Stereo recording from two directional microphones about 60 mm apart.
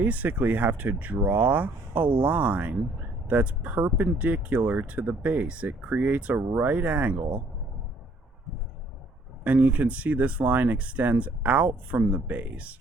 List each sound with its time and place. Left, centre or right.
0.0 s speech: right
9.4 s speech: right